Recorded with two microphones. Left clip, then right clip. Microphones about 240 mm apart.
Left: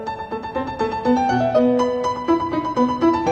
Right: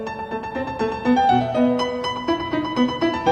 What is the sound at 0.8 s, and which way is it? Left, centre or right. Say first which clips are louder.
Music: even; centre.